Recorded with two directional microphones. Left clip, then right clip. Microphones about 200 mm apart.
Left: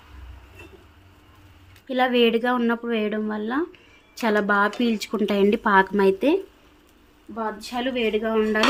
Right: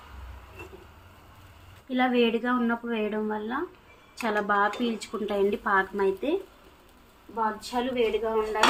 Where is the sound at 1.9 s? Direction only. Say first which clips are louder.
Left 5 dB; 55° left (ahead or behind).